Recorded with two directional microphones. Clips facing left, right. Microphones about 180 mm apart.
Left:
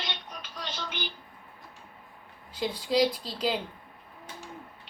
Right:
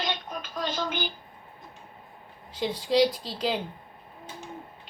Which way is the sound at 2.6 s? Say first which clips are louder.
Right 2 dB; centre (ahead or behind).